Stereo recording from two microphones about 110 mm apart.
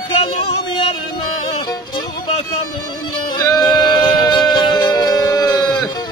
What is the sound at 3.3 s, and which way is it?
Music, 40° left (ahead or behind).